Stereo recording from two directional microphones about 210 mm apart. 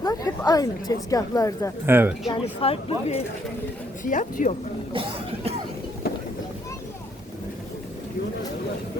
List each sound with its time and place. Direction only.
0.0 s a woman's voice: 15° left (ahead or behind)
1.9 s speech: 10° right (ahead or behind)
2.3 s a woman's voice: 25° left (ahead or behind)
4.9 s music: 30° right (ahead or behind)